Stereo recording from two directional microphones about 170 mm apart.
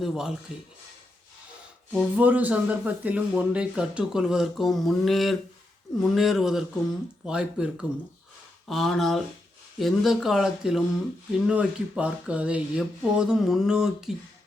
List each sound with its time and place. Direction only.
0.0 s speech: 5° right (ahead or behind)
1.9 s speech: 5° right (ahead or behind)